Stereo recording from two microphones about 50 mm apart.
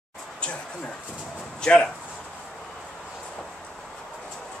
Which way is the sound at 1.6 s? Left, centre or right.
Centre.